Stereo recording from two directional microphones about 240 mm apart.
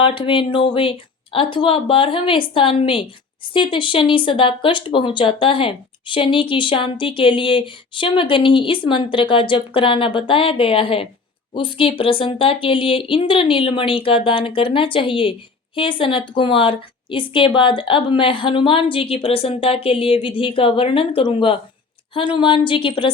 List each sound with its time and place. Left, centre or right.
0.0 s speech: left